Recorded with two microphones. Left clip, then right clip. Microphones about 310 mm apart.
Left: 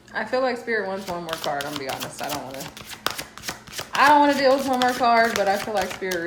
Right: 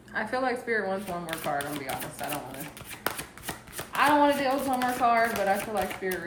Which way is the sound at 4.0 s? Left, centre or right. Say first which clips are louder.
Left 6 dB; centre.